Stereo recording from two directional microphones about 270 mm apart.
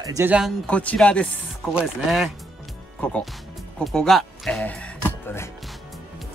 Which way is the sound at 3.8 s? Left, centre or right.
Centre.